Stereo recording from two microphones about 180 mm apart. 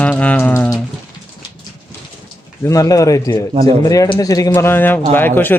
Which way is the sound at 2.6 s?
20° left (ahead or behind).